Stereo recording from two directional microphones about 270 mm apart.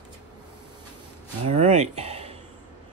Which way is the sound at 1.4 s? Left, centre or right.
Right.